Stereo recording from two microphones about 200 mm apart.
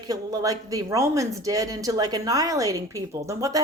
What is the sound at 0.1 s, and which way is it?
Speech, 15° right (ahead or behind).